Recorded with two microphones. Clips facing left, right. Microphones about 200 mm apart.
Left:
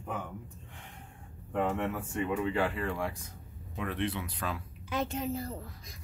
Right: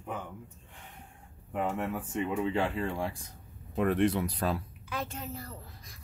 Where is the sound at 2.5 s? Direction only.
25° right (ahead or behind).